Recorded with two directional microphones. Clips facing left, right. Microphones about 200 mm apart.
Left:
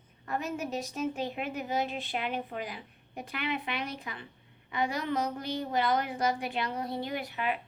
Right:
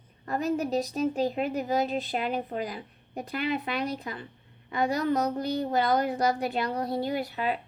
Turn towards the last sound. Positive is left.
turn(degrees=-35)  # may be behind; listen again after turning